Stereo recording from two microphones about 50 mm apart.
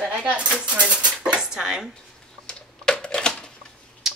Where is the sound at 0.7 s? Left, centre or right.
Right.